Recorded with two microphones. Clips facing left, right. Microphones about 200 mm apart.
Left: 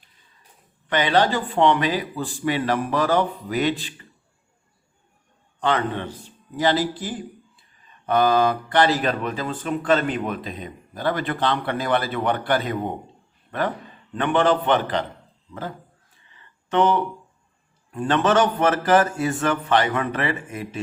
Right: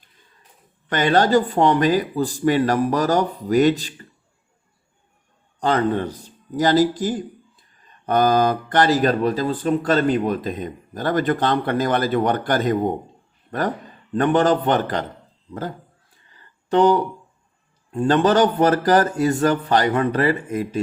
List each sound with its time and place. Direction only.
0.9 s speech: 45° right (ahead or behind)
5.5 s a man's voice: 40° right (ahead or behind)
16.3 s a sound: 35° right (ahead or behind)
17.9 s speech: 35° right (ahead or behind)